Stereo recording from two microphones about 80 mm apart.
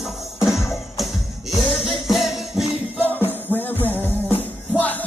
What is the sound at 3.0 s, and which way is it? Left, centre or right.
Music, left.